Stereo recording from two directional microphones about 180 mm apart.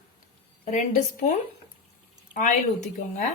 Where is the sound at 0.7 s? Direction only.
40° left (ahead or behind).